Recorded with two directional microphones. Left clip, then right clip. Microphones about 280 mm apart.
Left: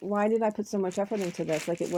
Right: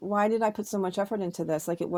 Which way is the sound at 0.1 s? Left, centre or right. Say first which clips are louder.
Right 1 dB; right.